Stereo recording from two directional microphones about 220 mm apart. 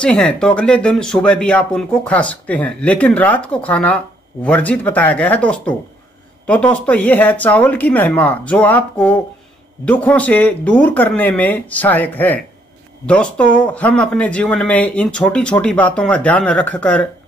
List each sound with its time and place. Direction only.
0.0 s speech: 5° left (ahead or behind)